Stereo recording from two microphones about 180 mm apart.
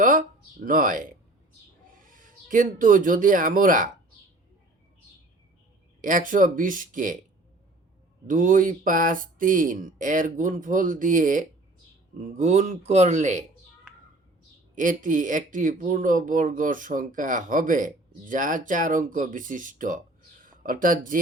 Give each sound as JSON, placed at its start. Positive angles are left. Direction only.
{"t": 0.0, "sound": "speech", "side_deg": -50}
{"t": 2.0, "sound": "speech", "side_deg": -50}
{"t": 6.0, "sound": "speech", "side_deg": -45}
{"t": 8.3, "sound": "speech", "side_deg": -45}
{"t": 14.8, "sound": "speech", "side_deg": -45}